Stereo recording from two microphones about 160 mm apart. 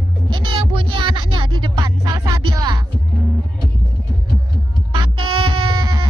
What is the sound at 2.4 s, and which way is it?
Music, 25° right (ahead or behind).